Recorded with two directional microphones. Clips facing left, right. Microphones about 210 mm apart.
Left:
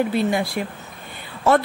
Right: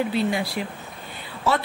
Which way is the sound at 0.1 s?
50° left (ahead or behind).